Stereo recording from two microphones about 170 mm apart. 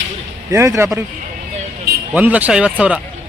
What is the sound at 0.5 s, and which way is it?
Speech, 15° right (ahead or behind).